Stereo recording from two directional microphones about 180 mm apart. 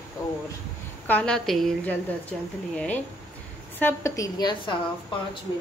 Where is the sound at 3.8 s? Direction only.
15° left (ahead or behind).